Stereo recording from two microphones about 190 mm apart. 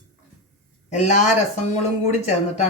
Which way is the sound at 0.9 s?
35° left (ahead or behind).